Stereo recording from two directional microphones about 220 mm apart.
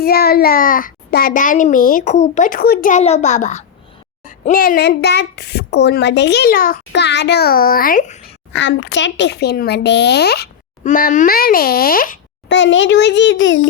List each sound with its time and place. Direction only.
0.0 s a child's voice: 45° left (ahead or behind)
8.5 s speech: 55° left (ahead or behind)
10.8 s a child's voice: 35° left (ahead or behind)
12.5 s a child's voice: 55° left (ahead or behind)